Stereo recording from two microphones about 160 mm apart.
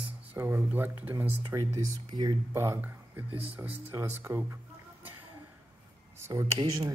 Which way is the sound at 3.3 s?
35° right (ahead or behind).